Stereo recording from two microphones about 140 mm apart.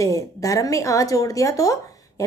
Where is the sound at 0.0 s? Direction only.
20° left (ahead or behind).